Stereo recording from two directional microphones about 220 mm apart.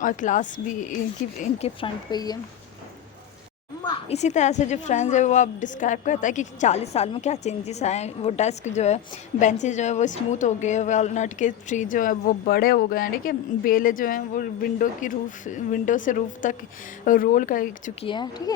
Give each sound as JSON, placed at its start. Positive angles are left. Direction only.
{"t": 0.0, "sound": "a woman's voice", "side_deg": 35}
{"t": 3.8, "sound": "a woman's voice", "side_deg": 25}
{"t": 18.0, "sound": "speech", "side_deg": 20}